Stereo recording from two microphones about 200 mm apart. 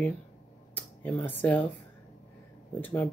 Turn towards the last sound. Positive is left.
turn(degrees=10)  # may be behind; listen again after turning